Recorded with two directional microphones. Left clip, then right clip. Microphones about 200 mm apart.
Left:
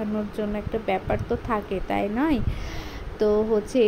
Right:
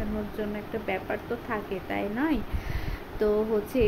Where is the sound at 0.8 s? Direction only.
25° left (ahead or behind).